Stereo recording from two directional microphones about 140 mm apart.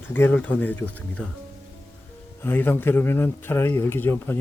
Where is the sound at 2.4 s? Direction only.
15° left (ahead or behind).